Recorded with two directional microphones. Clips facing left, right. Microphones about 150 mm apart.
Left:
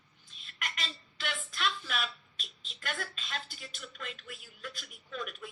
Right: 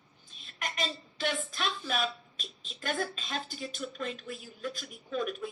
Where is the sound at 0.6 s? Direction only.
35° right (ahead or behind).